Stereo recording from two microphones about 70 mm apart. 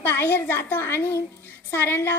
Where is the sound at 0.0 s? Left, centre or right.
Left.